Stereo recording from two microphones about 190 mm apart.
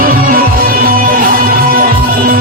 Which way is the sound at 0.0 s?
50° right (ahead or behind).